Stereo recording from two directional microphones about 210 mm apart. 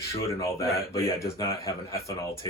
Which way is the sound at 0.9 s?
15° left (ahead or behind).